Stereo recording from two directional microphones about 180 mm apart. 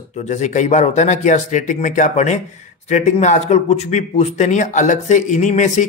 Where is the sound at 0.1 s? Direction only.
40° left (ahead or behind).